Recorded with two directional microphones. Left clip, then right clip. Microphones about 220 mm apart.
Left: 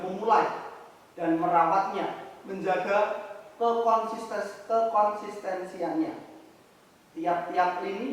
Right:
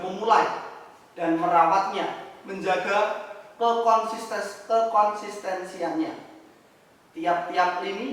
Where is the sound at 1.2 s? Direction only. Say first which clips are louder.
Right 3 dB; 10° left (ahead or behind).